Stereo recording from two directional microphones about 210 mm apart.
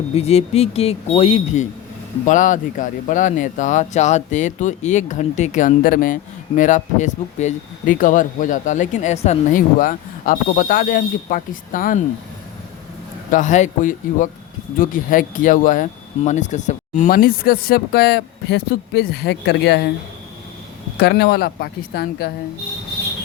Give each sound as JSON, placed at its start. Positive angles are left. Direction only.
{"t": 0.1, "sound": "speech", "side_deg": 30}
{"t": 13.3, "sound": "speech", "side_deg": 35}
{"t": 21.0, "sound": "speech", "side_deg": 50}